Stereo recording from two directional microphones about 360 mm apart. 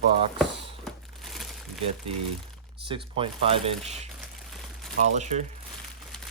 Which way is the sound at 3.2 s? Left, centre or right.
Centre.